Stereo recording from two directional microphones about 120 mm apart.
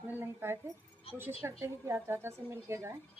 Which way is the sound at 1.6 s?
20° right (ahead or behind).